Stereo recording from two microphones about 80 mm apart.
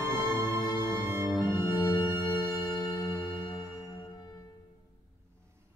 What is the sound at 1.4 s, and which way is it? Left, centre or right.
Music, left.